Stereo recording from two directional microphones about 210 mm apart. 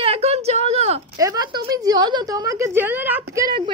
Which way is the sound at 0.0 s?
30° right (ahead or behind).